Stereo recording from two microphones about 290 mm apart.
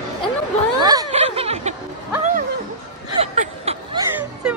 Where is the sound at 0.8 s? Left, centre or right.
Centre.